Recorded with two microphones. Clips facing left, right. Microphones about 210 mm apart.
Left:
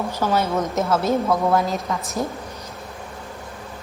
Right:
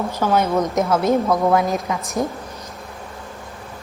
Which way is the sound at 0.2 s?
5° left (ahead or behind).